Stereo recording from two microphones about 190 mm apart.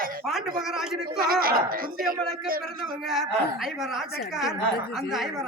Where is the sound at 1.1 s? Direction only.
50° right (ahead or behind).